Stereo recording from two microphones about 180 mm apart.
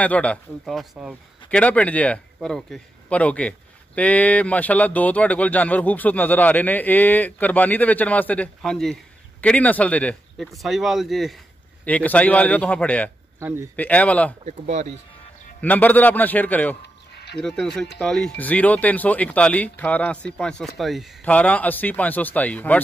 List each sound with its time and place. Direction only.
0.0 s a man's voice: 5° left (ahead or behind)
1.6 s a man's voice: 10° left (ahead or behind)
13.4 s speech: 15° right (ahead or behind)
13.7 s a man's voice: 10° left (ahead or behind)
14.4 s speech: 40° right (ahead or behind)
15.6 s a man's voice: 10° left (ahead or behind)
16.8 s a sound: 65° left (ahead or behind)
17.4 s a man's voice: 5° left (ahead or behind)